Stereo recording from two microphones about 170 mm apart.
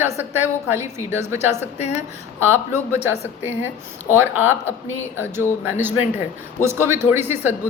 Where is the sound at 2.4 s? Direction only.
15° right (ahead or behind).